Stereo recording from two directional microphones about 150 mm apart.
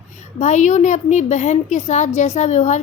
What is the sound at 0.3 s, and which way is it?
A woman's voice, 50° left (ahead or behind).